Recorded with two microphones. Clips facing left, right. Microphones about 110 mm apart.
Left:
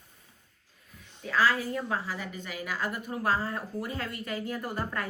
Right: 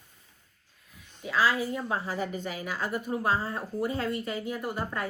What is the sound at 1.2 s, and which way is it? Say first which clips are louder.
A woman's voice: even; 15° right (ahead or behind).